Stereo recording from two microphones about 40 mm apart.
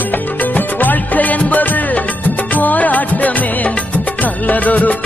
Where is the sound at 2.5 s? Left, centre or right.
Left.